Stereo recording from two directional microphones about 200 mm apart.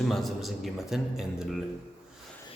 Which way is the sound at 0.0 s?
Centre (ahead or behind).